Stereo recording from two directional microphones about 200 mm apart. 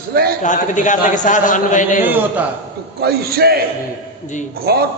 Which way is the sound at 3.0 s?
50° right (ahead or behind).